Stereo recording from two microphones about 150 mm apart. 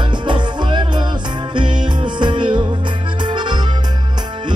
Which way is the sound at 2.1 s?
30° right (ahead or behind).